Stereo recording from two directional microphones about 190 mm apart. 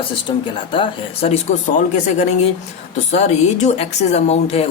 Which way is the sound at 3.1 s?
35° left (ahead or behind).